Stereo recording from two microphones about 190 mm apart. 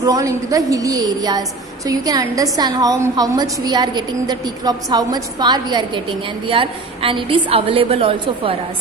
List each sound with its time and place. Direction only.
0.0 s a woman's voice: 20° right (ahead or behind)